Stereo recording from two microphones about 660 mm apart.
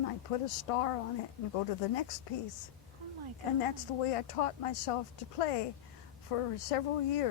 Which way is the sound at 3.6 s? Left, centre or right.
Left.